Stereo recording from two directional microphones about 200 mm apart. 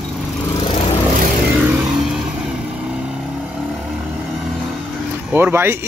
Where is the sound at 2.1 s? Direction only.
5° right (ahead or behind).